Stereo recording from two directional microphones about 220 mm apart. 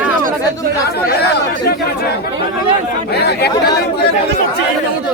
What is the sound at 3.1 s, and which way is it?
Speech, 45° left (ahead or behind).